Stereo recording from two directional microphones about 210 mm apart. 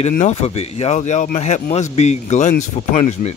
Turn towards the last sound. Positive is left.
turn(degrees=30)  # may be behind; listen again after turning